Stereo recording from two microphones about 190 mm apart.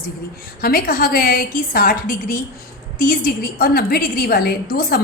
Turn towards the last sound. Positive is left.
turn(degrees=50)  # may be behind; listen again after turning